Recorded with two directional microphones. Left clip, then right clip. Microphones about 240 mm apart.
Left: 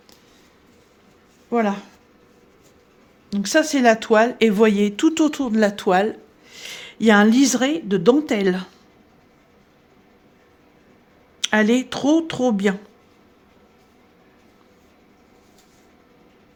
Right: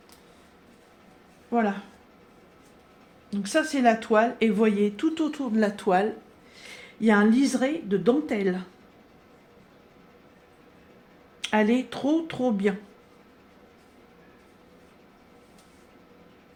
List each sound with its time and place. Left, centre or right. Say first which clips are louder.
1.5 s speech: left 5 dB; left
3.2 s speech: left 7 dB; left
11.3 s speech: left 5 dB; left